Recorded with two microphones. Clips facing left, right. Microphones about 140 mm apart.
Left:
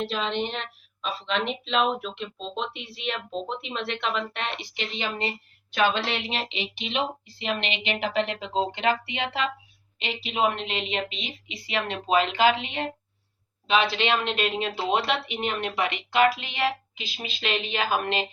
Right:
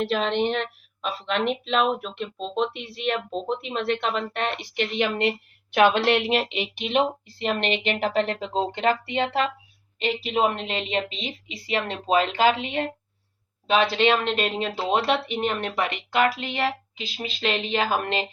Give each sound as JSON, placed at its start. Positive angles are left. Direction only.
{"t": 0.0, "sound": "a woman's voice", "side_deg": -60}